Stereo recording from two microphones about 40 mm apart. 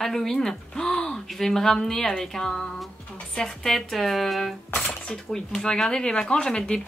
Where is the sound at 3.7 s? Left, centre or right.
Centre.